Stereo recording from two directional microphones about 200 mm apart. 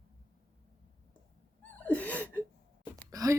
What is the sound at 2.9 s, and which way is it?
Gasp, 15° right (ahead or behind).